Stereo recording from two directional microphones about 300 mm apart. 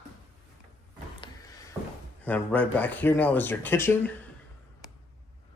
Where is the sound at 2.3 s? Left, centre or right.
Centre.